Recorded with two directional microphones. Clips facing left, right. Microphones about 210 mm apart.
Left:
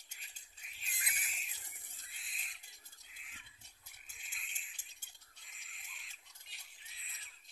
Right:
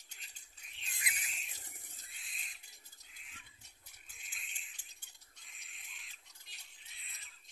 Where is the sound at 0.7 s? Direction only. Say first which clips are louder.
Right 3 dB; 5° left (ahead or behind).